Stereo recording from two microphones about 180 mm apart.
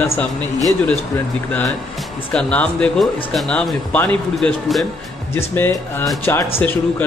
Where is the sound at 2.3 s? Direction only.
5° left (ahead or behind).